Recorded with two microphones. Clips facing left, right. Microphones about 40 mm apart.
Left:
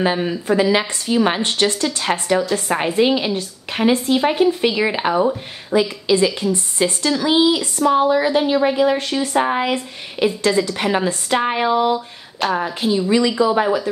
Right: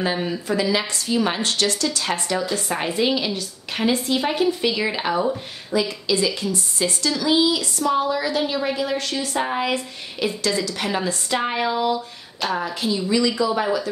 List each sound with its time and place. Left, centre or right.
0.0 s a woman's voice: left
11.4 s a sound: left
12.6 s speech: left